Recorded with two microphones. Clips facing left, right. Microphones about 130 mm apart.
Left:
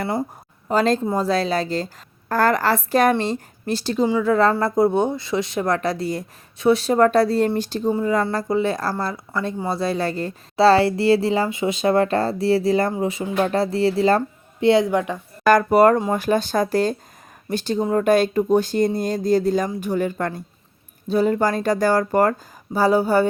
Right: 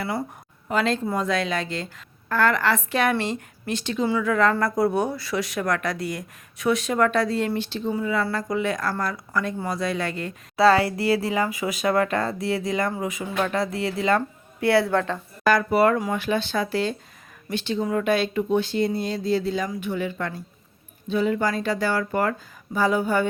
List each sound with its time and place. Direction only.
0.7 s speech: 40° left (ahead or behind)
14.2 s a woman's voice: 20° left (ahead or behind)
15.4 s speech: 45° left (ahead or behind)